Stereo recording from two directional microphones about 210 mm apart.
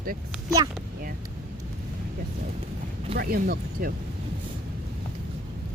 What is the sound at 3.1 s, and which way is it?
Speech, 45° right (ahead or behind).